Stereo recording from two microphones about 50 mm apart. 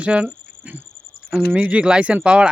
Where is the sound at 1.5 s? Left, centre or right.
Right.